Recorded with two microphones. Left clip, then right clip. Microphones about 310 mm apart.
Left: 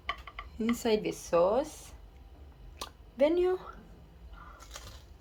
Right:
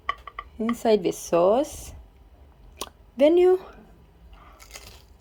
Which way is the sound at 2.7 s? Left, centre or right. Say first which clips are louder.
Right 7 dB; right.